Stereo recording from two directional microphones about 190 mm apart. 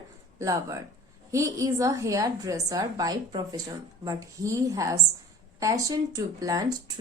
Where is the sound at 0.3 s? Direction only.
15° right (ahead or behind).